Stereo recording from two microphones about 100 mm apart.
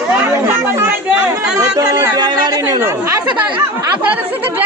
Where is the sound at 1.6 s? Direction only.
35° right (ahead or behind).